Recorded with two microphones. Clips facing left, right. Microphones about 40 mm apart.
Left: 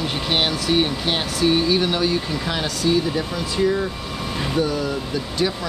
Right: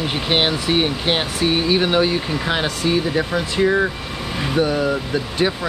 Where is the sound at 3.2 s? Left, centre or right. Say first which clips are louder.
Right 3 dB; right.